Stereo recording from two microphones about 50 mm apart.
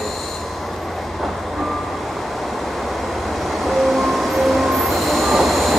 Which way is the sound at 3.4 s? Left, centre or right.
Centre.